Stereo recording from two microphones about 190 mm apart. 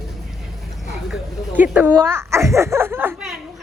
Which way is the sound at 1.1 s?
5° right (ahead or behind).